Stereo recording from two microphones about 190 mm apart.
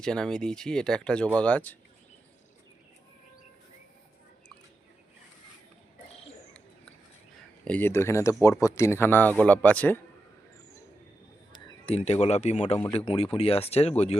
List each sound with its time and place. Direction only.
0.0 s speech: 5° left (ahead or behind)
7.6 s speech: 10° left (ahead or behind)
11.5 s speech: 30° left (ahead or behind)